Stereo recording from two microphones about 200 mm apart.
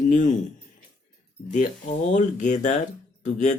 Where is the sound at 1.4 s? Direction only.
40° left (ahead or behind).